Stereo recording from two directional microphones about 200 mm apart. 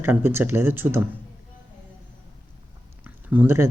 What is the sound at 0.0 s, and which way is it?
Speech, 10° right (ahead or behind).